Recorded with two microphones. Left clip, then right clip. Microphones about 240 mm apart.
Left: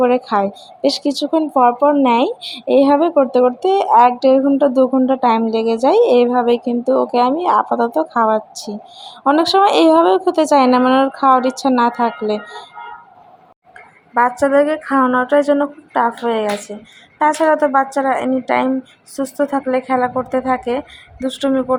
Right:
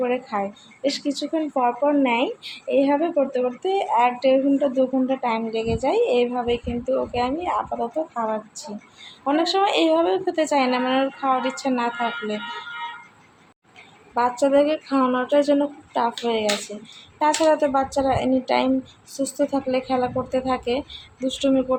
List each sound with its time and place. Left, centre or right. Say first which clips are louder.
0.0 s speech: left 9 dB; left
14.1 s speech: left 6 dB; centre